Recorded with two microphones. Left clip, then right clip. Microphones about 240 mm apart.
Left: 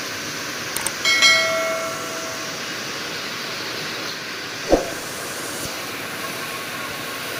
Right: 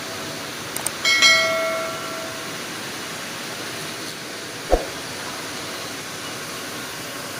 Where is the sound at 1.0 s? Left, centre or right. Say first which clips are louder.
Even; centre.